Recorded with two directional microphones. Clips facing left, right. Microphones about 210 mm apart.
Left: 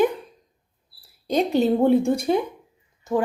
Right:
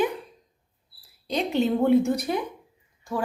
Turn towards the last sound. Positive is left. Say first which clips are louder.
# left 7 dB
turn(degrees=20)  # may be behind; listen again after turning